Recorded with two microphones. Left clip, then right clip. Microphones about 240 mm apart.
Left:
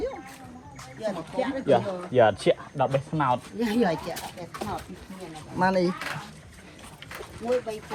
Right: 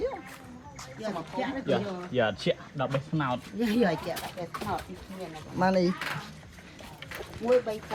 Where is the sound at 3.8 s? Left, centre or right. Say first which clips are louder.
Left 2 dB; centre.